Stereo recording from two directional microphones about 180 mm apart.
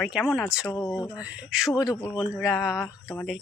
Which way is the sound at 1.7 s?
20° left (ahead or behind).